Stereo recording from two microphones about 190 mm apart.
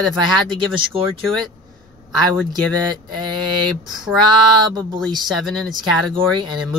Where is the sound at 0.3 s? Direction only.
25° right (ahead or behind).